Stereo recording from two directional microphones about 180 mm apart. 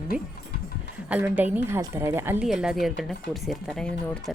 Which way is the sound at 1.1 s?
10° right (ahead or behind).